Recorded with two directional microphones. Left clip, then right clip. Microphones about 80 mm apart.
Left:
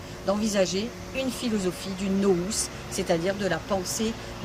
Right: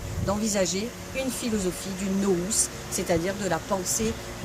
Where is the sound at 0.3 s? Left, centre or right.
Left.